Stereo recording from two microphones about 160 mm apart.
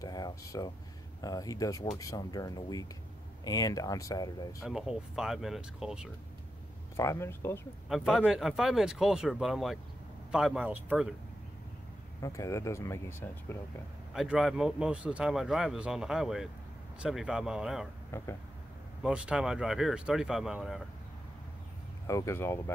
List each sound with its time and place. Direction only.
0.0 s a sound: 20° left (ahead or behind)
1.2 s speech: 20° left (ahead or behind)
4.6 s speech: 5° right (ahead or behind)
7.0 s speech: 15° left (ahead or behind)
7.9 s speech: centre (ahead or behind)
12.2 s speech: 20° left (ahead or behind)
14.1 s speech: 5° right (ahead or behind)
18.1 s speech: 15° left (ahead or behind)
19.0 s speech: 5° right (ahead or behind)
22.0 s speech: 20° left (ahead or behind)